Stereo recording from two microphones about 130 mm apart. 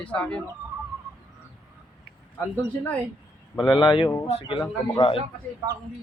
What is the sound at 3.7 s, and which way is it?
Speech, 40° left (ahead or behind).